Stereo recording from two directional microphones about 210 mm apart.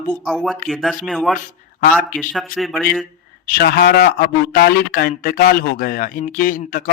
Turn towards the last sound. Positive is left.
turn(degrees=40)  # may be behind; listen again after turning